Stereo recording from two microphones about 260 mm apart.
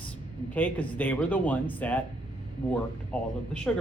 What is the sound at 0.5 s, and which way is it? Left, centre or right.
Speech, centre.